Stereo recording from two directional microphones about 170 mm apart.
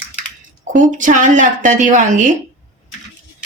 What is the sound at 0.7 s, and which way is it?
Speech, 50° right (ahead or behind).